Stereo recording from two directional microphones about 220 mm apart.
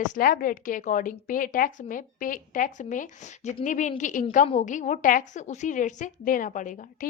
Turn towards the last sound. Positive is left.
turn(degrees=35)  # may be behind; listen again after turning